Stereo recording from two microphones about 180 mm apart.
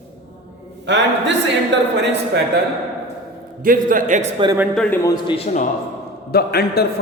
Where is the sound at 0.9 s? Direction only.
75° right (ahead or behind).